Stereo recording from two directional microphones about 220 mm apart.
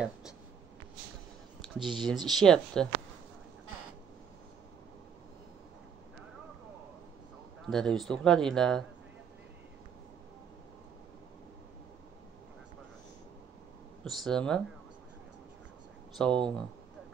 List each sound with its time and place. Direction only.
1.8 s a man's voice: centre (ahead or behind)
7.6 s a man's voice: centre (ahead or behind)
14.0 s a man's voice: centre (ahead or behind)
16.2 s a man's voice: 5° left (ahead or behind)